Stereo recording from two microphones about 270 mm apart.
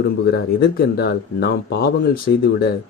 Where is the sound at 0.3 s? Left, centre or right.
Left.